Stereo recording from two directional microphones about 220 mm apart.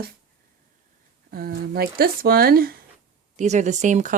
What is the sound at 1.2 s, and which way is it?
Speech, 45° right (ahead or behind).